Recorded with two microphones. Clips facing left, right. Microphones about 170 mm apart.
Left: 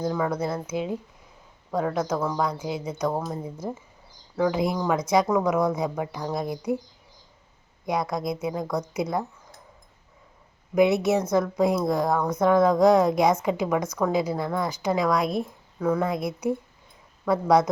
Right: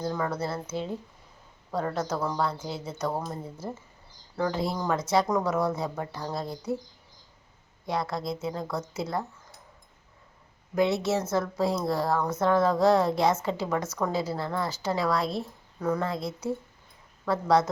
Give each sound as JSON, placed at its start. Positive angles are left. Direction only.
{"t": 0.1, "sound": "speech", "side_deg": 10}
{"t": 7.9, "sound": "speech", "side_deg": 15}
{"t": 10.8, "sound": "speech", "side_deg": 20}